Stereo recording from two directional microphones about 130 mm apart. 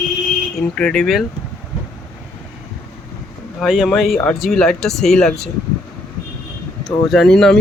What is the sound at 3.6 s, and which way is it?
Speech, centre (ahead or behind).